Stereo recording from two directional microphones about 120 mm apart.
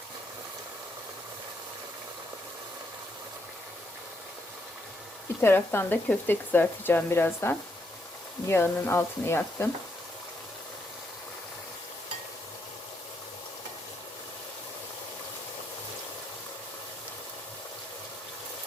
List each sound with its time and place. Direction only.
5.4 s speech: 20° left (ahead or behind)